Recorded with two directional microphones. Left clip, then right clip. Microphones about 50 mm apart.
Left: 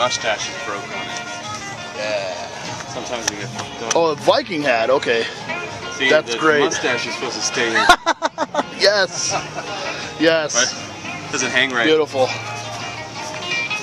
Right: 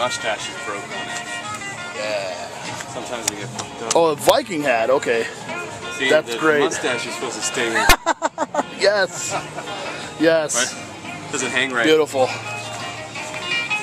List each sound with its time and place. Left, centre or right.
0.0 s speech: centre
2.0 s speech: centre
4.0 s speech: right
4.6 s speech: centre
6.0 s speech: centre
7.7 s a sound: centre
8.7 s speech: right
10.2 s speech: right
11.4 s speech: centre
11.9 s speech: right